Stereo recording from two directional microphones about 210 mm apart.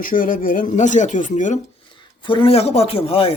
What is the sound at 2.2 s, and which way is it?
Speech, 25° left (ahead or behind).